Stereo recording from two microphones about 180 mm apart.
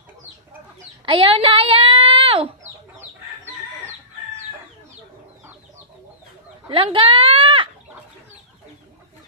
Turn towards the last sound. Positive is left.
turn(degrees=-30)  # may be behind; listen again after turning